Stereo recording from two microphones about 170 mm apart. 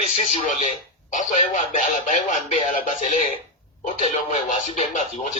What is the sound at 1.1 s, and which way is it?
Speech, 45° left (ahead or behind).